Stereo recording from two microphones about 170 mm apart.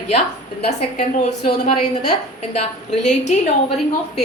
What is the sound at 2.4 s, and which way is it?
Speech, 35° left (ahead or behind).